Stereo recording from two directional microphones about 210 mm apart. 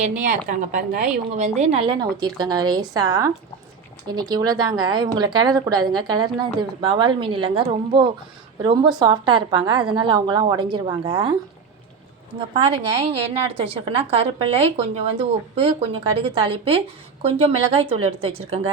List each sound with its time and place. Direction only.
0.0 s a woman's voice: 35° right (ahead or behind); by 11.3 s 20° right (ahead or behind)
12.4 s a woman's voice: 25° right (ahead or behind)